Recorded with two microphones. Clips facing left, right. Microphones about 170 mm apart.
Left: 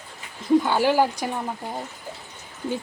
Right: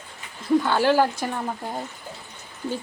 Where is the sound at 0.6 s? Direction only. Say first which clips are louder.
Even; 15° left (ahead or behind).